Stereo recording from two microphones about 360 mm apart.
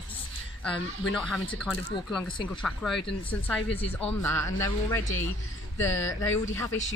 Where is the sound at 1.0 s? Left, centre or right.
Centre.